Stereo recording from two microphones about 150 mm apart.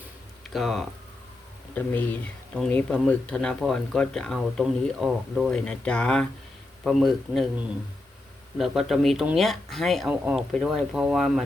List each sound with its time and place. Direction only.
0.5 s speech: centre (ahead or behind)
1.7 s speech: 10° left (ahead or behind)
8.5 s speech: centre (ahead or behind)